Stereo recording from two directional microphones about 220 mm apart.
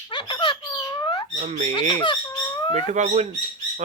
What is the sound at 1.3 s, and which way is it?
Speech, 30° right (ahead or behind).